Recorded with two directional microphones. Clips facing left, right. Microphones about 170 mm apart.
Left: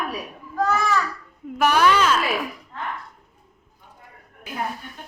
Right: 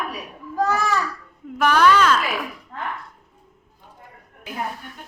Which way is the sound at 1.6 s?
10° left (ahead or behind).